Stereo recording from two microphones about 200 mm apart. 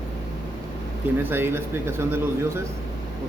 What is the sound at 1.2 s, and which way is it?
A man's voice, 10° right (ahead or behind).